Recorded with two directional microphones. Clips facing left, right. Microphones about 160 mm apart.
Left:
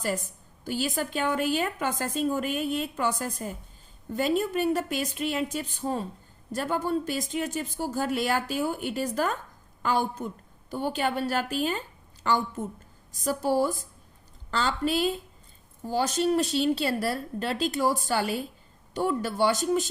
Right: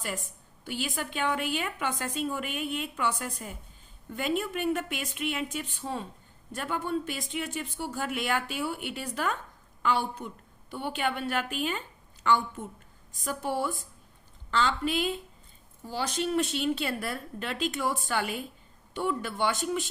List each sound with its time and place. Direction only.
0.6 s speech: 40° left (ahead or behind)